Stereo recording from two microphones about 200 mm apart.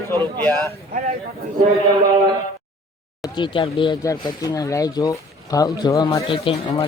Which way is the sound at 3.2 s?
25° left (ahead or behind).